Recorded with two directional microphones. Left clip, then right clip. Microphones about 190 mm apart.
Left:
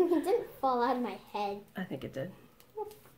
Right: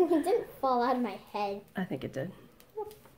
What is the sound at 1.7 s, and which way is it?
Speech, 25° right (ahead or behind).